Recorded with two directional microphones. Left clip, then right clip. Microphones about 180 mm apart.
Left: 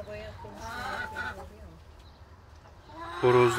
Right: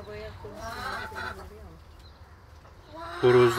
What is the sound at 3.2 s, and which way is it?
Speech, centre (ahead or behind).